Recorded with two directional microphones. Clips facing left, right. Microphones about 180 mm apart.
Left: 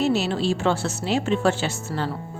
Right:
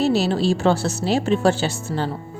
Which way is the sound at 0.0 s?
35° right (ahead or behind).